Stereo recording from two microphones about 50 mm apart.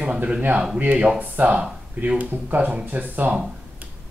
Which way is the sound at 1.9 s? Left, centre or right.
Right.